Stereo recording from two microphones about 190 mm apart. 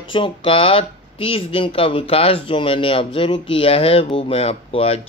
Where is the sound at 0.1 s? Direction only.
25° left (ahead or behind).